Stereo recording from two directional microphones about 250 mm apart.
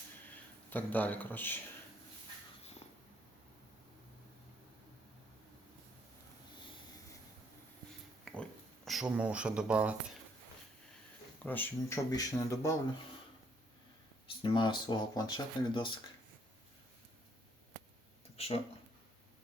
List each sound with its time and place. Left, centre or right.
0.7 s speech: centre
8.2 s a sound: centre
11.4 s speech: centre
14.4 s speech: centre
18.3 s speech: left